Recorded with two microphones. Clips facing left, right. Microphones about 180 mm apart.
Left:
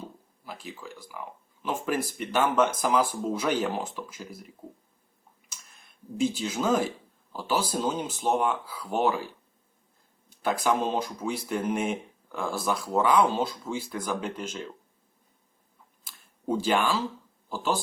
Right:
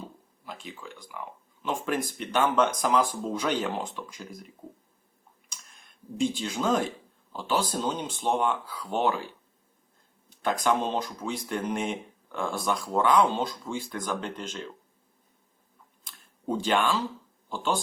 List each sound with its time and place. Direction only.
0.4 s speech: 5° left (ahead or behind)
5.5 s a sound: centre (ahead or behind)
7.3 s speech: 5° left (ahead or behind)
10.4 s speech: 10° left (ahead or behind)
16.0 s a sound: 5° left (ahead or behind)
17.5 s speech: 5° left (ahead or behind)